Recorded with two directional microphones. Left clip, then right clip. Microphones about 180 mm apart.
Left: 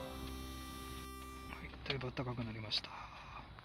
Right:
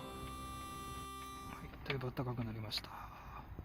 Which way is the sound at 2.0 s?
5° right (ahead or behind).